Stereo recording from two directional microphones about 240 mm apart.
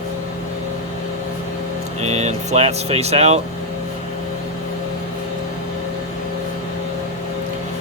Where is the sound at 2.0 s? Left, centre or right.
Right.